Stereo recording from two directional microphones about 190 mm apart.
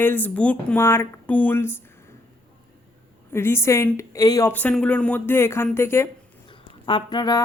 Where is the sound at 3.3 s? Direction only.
15° left (ahead or behind).